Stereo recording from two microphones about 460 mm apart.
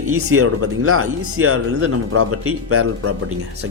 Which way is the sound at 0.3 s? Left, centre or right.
Right.